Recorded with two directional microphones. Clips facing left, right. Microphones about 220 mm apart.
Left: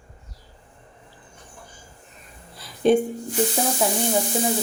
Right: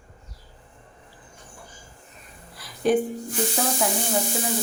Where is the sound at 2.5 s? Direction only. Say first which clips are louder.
Left 3 dB; 25° left (ahead or behind).